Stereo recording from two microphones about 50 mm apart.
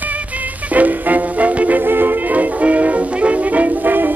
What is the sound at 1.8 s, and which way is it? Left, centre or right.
Music, right.